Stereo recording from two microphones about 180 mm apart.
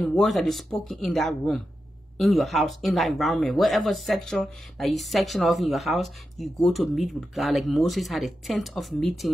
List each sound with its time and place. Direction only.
0.0 s speech: centre (ahead or behind)